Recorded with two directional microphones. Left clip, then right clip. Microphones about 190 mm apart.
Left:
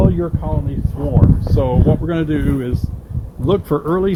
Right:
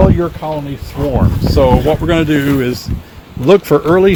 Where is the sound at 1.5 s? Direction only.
50° right (ahead or behind).